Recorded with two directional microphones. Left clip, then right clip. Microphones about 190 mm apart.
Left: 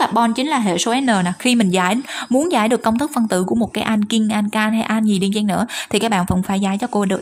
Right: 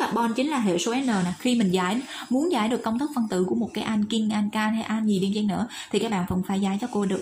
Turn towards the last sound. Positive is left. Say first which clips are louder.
# left 8 dB
turn(degrees=40)  # may be behind; listen again after turning